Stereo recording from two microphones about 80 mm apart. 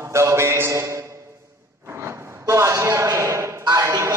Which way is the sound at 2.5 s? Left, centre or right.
Right.